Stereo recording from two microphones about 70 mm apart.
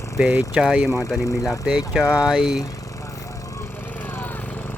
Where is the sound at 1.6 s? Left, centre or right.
Centre.